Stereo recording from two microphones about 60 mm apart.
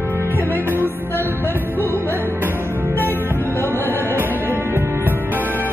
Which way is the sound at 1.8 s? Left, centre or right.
Left.